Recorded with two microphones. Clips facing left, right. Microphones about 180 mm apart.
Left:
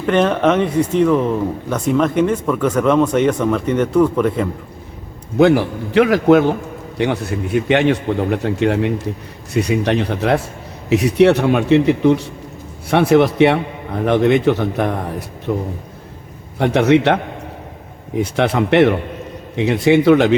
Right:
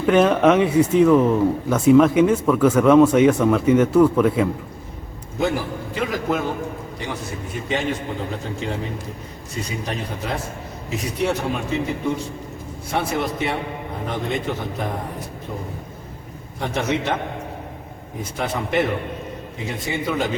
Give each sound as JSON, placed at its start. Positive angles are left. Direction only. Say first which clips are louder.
{"t": 0.0, "sound": "speech", "louder": "even", "side_deg": -5}
{"t": 5.4, "sound": "a man's voice", "louder": "left 10 dB", "side_deg": 80}
{"t": 7.0, "sound": "a man's voice", "louder": "left 12 dB", "side_deg": 65}
{"t": 15.5, "sound": "a man's voice", "louder": "left 12 dB", "side_deg": 90}
{"t": 16.6, "sound": "a man's voice", "louder": "left 10 dB", "side_deg": 70}
{"t": 18.2, "sound": "a man's voice", "louder": "left 9 dB", "side_deg": 75}